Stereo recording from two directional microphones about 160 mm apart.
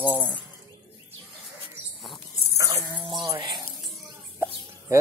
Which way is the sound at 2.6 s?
20° right (ahead or behind).